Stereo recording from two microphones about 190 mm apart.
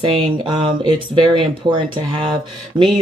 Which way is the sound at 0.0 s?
25° right (ahead or behind).